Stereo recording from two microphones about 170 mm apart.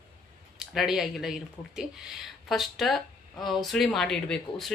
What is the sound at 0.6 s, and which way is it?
Speech, centre (ahead or behind).